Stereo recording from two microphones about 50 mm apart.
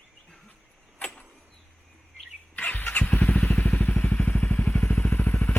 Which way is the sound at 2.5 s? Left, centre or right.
Left.